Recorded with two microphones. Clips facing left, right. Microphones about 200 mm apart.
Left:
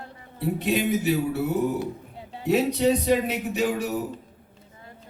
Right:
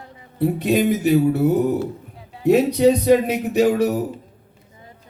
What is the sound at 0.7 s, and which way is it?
Speech, 45° right (ahead or behind).